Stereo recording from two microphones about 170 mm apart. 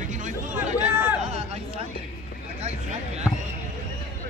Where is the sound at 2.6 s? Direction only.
40° right (ahead or behind).